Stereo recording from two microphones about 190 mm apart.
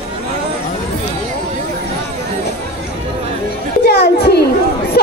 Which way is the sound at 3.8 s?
60° left (ahead or behind).